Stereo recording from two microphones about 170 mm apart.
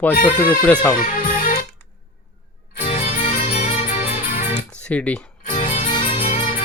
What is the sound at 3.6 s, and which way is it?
Music, 55° left (ahead or behind).